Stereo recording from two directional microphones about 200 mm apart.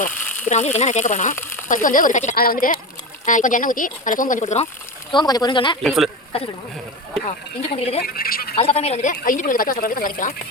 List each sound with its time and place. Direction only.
0.3 s a sound: 40° left (ahead or behind)
0.8 s speech: 35° left (ahead or behind)
5.1 s speech: 20° left (ahead or behind)
5.8 s speech: centre (ahead or behind)
7.8 s speech: 30° left (ahead or behind)
8.0 s speech: 50° left (ahead or behind)
8.5 s speech: 30° left (ahead or behind)